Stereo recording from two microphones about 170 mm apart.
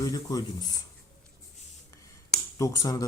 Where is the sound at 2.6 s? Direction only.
20° left (ahead or behind).